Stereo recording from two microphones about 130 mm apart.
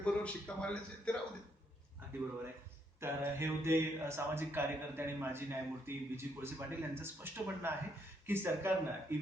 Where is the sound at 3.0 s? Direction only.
20° right (ahead or behind).